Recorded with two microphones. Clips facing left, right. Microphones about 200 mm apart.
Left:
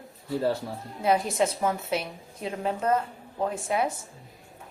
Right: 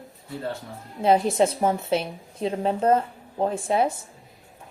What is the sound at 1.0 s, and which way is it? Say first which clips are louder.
A woman's voice: right 5 dB; 30° right (ahead or behind).